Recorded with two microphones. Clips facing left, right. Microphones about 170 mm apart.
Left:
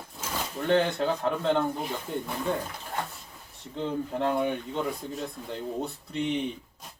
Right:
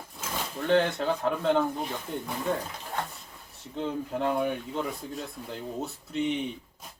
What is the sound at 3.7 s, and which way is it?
Speech, centre (ahead or behind).